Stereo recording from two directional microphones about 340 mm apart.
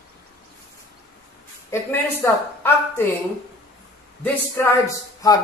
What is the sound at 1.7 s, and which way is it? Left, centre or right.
A man's voice, centre.